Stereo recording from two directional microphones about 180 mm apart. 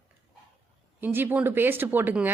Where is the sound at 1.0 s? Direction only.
10° right (ahead or behind).